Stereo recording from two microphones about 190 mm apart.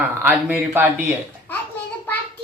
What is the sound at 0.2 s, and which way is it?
Speech, 10° right (ahead or behind).